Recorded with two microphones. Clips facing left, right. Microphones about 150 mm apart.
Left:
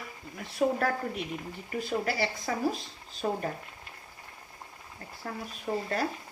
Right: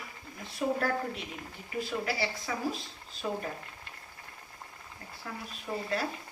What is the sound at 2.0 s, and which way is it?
Speech, 50° left (ahead or behind).